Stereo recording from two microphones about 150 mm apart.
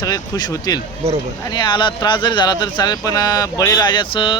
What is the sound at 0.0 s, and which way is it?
Speech, 25° left (ahead or behind).